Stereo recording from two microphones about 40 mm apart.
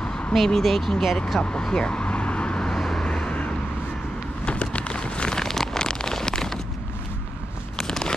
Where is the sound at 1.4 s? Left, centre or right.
Left.